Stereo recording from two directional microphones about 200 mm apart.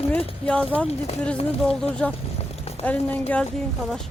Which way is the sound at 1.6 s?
5° left (ahead or behind).